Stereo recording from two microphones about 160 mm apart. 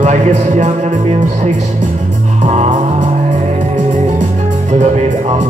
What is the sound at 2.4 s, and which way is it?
Music, 45° right (ahead or behind).